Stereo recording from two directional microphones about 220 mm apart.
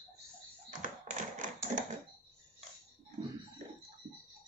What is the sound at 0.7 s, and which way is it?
Tap, 35° right (ahead or behind).